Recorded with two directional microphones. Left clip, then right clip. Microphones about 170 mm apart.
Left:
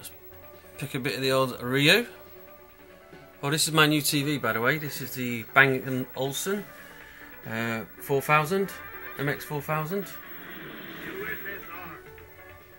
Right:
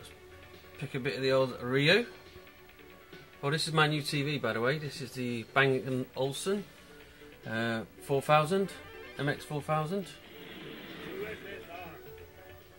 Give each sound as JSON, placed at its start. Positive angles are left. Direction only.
{"t": 0.7, "sound": "speech", "side_deg": 35}
{"t": 3.3, "sound": "speech", "side_deg": 30}
{"t": 4.7, "sound": "speech", "side_deg": 5}